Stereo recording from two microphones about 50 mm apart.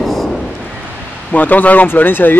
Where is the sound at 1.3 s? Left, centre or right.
Left.